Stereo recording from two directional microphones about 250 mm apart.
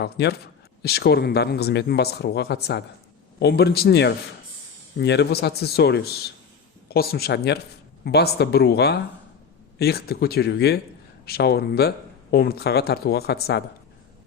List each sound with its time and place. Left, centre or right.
0.0 s speech: left